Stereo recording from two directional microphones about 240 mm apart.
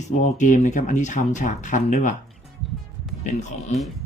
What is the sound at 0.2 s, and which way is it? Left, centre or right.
Speech, left.